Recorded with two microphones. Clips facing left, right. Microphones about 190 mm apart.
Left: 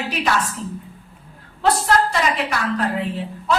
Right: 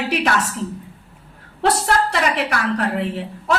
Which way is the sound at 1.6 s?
75° right (ahead or behind).